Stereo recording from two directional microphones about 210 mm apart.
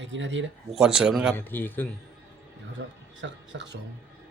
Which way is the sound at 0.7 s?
5° right (ahead or behind).